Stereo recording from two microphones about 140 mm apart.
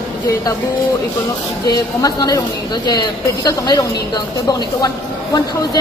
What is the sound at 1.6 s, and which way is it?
A woman's voice, 25° left (ahead or behind).